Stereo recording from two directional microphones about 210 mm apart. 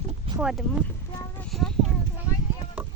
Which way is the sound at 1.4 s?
5° left (ahead or behind).